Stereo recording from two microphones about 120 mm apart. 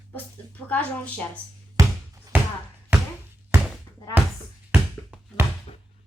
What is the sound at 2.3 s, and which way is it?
Basketball bounce, 15° right (ahead or behind).